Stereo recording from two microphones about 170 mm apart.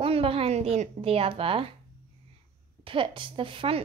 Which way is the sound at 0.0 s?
35° right (ahead or behind).